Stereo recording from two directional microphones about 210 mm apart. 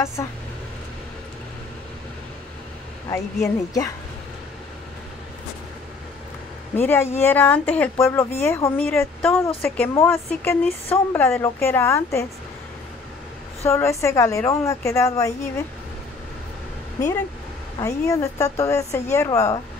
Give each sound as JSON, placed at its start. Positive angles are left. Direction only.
{"t": 0.0, "sound": "speech", "side_deg": 15}
{"t": 3.4, "sound": "speech", "side_deg": 15}
{"t": 6.7, "sound": "speech", "side_deg": 10}
{"t": 13.7, "sound": "speech", "side_deg": 15}
{"t": 17.7, "sound": "speech", "side_deg": 15}